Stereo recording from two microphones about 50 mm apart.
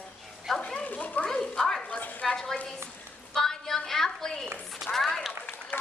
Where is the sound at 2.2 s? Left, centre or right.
Centre.